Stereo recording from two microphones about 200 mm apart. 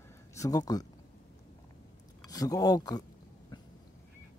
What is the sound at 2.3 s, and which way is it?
Speech, 20° left (ahead or behind).